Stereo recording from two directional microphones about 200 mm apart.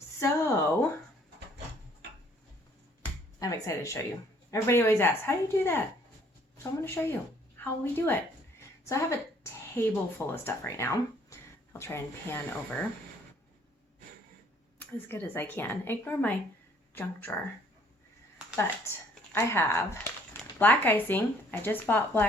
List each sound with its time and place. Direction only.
0.2 s a sound: 15° left (ahead or behind)
3.4 s a woman's voice: 15° left (ahead or behind)
14.8 s speech: 10° left (ahead or behind)
18.5 s speech: 15° left (ahead or behind)